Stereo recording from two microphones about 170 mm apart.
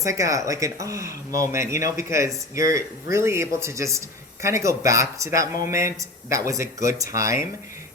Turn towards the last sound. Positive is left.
turn(degrees=-20)  # may be behind; listen again after turning